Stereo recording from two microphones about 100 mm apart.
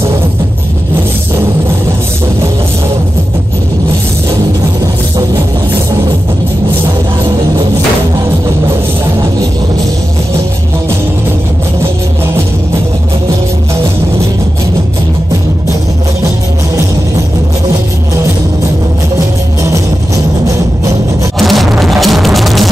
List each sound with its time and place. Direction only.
19.1 s music: 30° right (ahead or behind)
21.4 s music: centre (ahead or behind)